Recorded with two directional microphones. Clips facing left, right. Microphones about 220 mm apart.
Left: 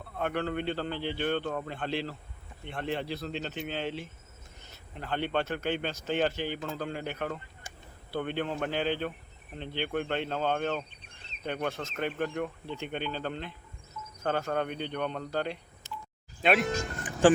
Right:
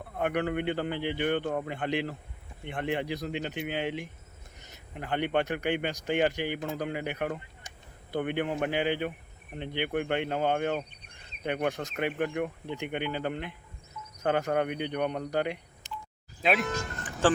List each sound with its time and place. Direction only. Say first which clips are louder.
0.2 s speech: right 2 dB; 15° right (ahead or behind)
16.4 s speech: left 1 dB; centre (ahead or behind)
17.2 s speech: left 4 dB; 15° left (ahead or behind)